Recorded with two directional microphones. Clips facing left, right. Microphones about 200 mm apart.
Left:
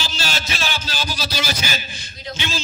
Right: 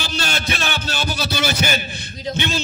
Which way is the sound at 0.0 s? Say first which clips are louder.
Right 3 dB; 55° right (ahead or behind).